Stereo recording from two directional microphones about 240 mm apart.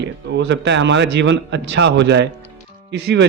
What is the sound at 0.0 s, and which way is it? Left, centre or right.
A man's voice, right.